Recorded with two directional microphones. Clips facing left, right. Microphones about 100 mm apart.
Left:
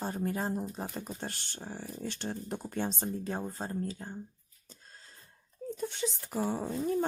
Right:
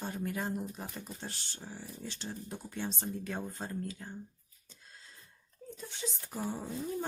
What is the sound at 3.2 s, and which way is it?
Speech, 30° left (ahead or behind).